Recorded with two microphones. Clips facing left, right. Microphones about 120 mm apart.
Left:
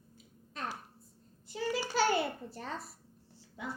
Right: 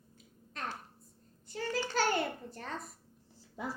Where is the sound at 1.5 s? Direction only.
10° left (ahead or behind).